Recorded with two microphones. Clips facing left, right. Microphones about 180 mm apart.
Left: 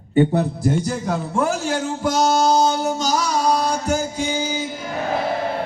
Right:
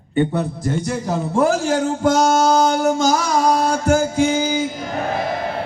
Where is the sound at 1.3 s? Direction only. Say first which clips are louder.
Right 6 dB; 40° right (ahead or behind).